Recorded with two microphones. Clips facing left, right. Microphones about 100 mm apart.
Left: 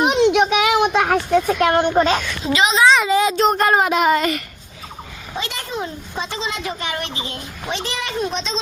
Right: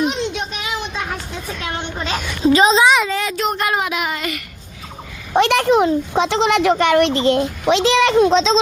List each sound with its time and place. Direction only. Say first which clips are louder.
0.0 s a sound: left 6 dB; 60° left (ahead or behind); by 2.2 s 40° left (ahead or behind)
2.4 s a child's voice: right 9 dB; 35° right (ahead or behind)
3.1 s speech: left 6 dB; 15° left (ahead or behind)
3.3 s speech: left 4 dB; 35° left (ahead or behind)
5.3 s speech: right 14 dB; 70° right (ahead or behind); by 8.5 s 90° right